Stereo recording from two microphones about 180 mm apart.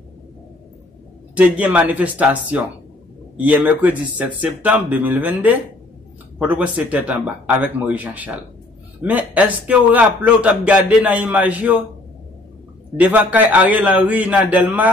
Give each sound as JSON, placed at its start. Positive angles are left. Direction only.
{"t": 1.3, "sound": "a man's voice", "side_deg": -10}
{"t": 12.9, "sound": "a man's voice", "side_deg": -10}